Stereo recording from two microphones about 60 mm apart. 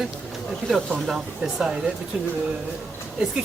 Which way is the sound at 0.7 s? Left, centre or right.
Centre.